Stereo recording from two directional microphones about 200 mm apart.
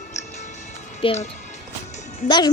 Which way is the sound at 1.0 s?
25° left (ahead or behind).